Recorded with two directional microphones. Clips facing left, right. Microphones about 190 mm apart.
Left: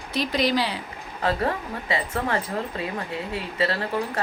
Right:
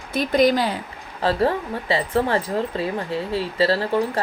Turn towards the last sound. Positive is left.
turn(degrees=-30)  # may be behind; listen again after turning